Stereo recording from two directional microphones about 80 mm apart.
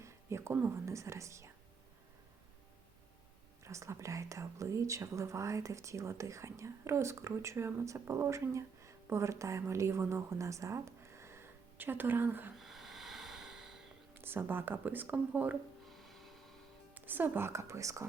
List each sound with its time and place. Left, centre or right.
0.0 s a sound: right
0.9 s speech: right
3.6 s speech: right
12.5 s a sound: centre
14.2 s speech: right
15.9 s music: centre
16.9 s speech: right